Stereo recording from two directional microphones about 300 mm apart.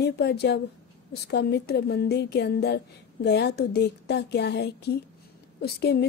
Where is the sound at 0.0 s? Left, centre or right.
Left.